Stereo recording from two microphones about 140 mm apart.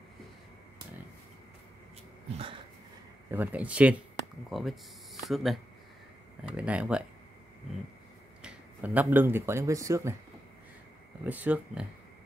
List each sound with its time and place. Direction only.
2.3 s speech: 40° right (ahead or behind)
3.3 s speech: 10° right (ahead or behind)
8.4 s speech: 10° right (ahead or behind)
11.2 s speech: 10° right (ahead or behind)